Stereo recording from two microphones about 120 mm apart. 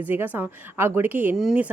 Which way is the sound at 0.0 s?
15° right (ahead or behind).